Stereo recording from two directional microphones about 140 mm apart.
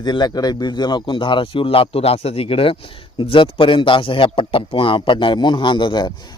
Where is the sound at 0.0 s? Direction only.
30° left (ahead or behind).